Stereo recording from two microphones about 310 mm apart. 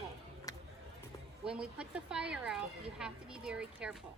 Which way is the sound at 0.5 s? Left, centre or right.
Centre.